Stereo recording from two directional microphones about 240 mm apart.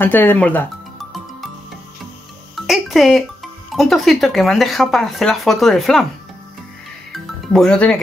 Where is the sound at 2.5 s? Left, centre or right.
Centre.